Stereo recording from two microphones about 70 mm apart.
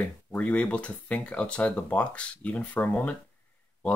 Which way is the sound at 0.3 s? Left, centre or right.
Centre.